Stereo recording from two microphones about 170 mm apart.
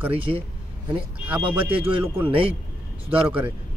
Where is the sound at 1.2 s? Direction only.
10° right (ahead or behind).